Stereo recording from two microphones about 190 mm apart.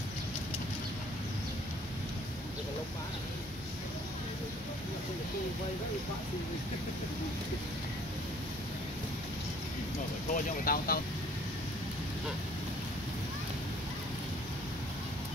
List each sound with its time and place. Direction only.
10.3 s speech: 50° left (ahead or behind)